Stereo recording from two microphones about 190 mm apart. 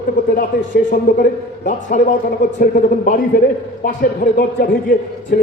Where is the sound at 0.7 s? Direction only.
45° left (ahead or behind).